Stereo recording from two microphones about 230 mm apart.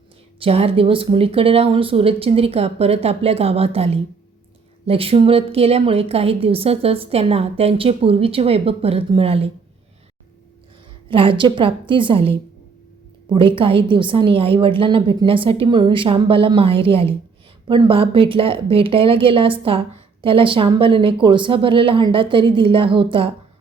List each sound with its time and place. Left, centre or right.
0.3 s a woman's voice: right
11.1 s a woman's voice: right